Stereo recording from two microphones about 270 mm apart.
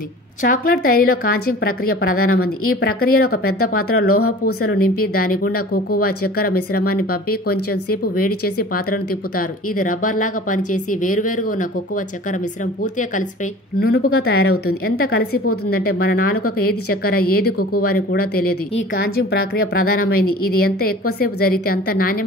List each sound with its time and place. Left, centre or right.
0.4 s speech: left
3.4 s speech: left
4.6 s speech: left
7.5 s speech: left
8.5 s speech: left
13.7 s speech: left